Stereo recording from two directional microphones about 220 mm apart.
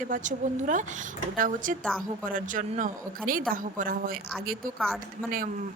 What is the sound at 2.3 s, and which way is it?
A woman's voice, 35° right (ahead or behind).